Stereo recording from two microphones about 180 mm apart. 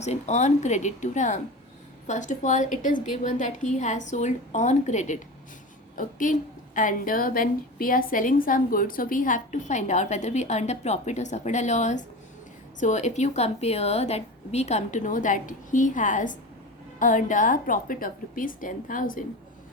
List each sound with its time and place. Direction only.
0.0 s a woman's voice: 40° left (ahead or behind)